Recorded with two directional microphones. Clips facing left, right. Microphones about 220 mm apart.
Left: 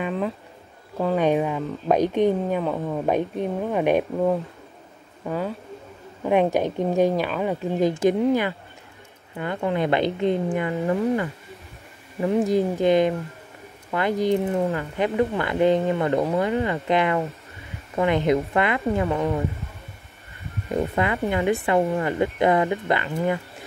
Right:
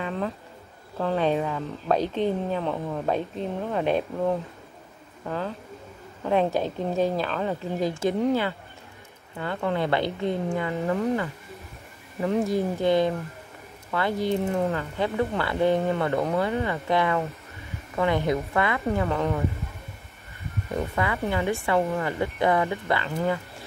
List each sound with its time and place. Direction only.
0.9 s speech: 15° left (ahead or behind)
2.6 s a woman's voice: 5° left (ahead or behind)
3.1 s speech: 15° left (ahead or behind)
5.2 s speech: 10° left (ahead or behind)
12.3 s speech: 15° left (ahead or behind)
20.9 s speech: 20° left (ahead or behind)